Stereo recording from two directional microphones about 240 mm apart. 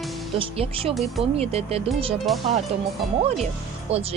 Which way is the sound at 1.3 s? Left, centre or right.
Right.